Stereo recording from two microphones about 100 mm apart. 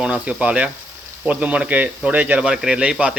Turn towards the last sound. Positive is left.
turn(degrees=-10)  # may be behind; listen again after turning